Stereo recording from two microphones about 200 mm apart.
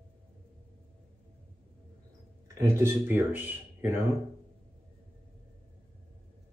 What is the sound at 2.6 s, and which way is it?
Speech, 15° right (ahead or behind).